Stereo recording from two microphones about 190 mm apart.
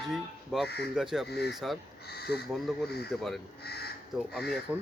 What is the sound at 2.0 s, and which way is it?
Speech, 60° left (ahead or behind).